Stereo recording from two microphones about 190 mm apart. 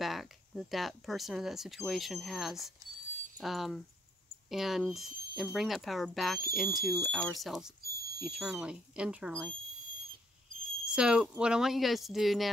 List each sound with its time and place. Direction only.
0.0 s speech: centre (ahead or behind)
7.8 s a sound: 55° right (ahead or behind)
8.2 s speech: 5° right (ahead or behind)
10.9 s speech: 5° right (ahead or behind)